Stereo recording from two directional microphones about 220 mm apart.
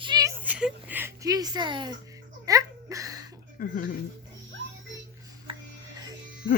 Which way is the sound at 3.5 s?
40° left (ahead or behind).